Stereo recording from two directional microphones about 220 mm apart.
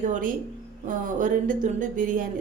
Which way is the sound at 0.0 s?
35° right (ahead or behind).